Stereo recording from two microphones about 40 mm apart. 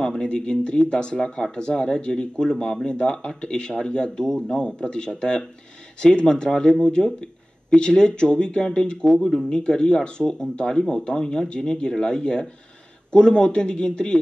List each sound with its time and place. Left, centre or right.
0.5 s speech: left